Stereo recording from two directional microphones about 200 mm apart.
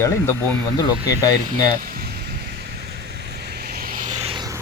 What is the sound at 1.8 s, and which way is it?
Vehicle, 45° right (ahead or behind).